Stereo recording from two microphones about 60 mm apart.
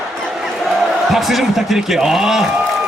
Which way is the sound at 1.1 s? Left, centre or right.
Centre.